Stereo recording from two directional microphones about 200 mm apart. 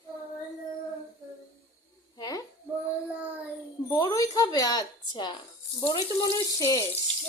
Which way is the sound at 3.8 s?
15° left (ahead or behind).